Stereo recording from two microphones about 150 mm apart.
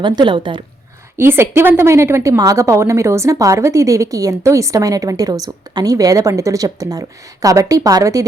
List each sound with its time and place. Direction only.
0.0 s a woman's voice: 30° right (ahead or behind)
1.1 s a woman's voice: 15° right (ahead or behind)